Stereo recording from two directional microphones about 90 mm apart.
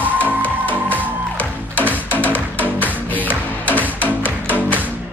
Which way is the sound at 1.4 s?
20° left (ahead or behind).